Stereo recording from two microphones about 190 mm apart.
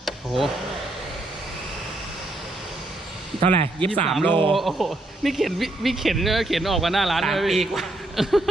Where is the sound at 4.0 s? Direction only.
5° left (ahead or behind).